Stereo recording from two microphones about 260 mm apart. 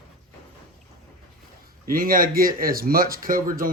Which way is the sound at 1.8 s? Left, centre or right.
Right.